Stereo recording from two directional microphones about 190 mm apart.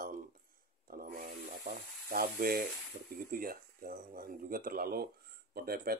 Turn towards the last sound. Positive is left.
turn(degrees=-55)  # may be behind; listen again after turning